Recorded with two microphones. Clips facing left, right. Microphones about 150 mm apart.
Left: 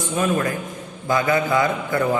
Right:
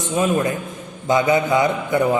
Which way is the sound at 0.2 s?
20° right (ahead or behind).